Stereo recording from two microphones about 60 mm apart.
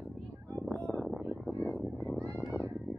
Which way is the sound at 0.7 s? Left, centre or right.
Left.